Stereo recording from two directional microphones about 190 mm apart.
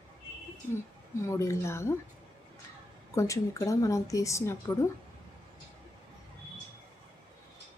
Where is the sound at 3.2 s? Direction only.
15° left (ahead or behind).